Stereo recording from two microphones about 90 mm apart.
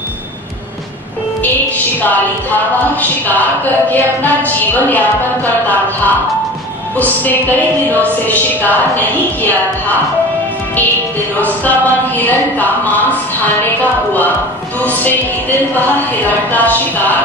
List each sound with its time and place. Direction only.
2.0 s a woman's voice: 20° left (ahead or behind)
11.3 s a woman's voice: 20° left (ahead or behind)
14.8 s a woman's voice: 20° left (ahead or behind)
16.5 s a sound: 20° left (ahead or behind)